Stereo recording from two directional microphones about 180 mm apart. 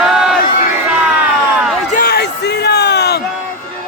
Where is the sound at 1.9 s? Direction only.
55° left (ahead or behind).